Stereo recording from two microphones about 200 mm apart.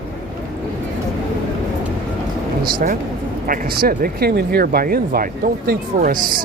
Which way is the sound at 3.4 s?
45° right (ahead or behind).